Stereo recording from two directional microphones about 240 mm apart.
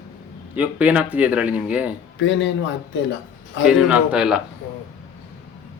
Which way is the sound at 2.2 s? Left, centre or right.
Left.